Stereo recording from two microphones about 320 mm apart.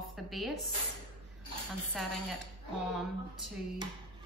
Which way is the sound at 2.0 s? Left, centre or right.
Centre.